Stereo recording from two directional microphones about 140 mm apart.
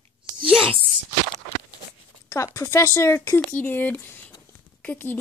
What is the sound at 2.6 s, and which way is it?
A woman's voice, 20° left (ahead or behind).